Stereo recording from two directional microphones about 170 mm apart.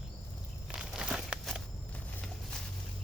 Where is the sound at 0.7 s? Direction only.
5° right (ahead or behind).